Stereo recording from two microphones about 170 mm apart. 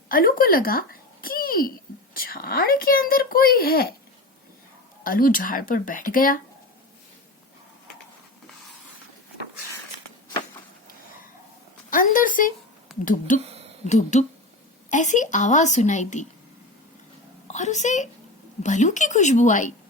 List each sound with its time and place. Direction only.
0.1 s a child's voice: 55° left (ahead or behind)
5.0 s speech: 55° left (ahead or behind)
11.9 s a woman's voice: 55° left (ahead or behind)
13.4 s a sound: 35° right (ahead or behind)
13.8 s speech: 45° left (ahead or behind)
17.5 s speech: 45° left (ahead or behind)